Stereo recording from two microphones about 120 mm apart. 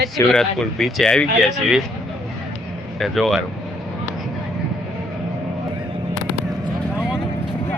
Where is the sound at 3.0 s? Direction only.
Centre (ahead or behind).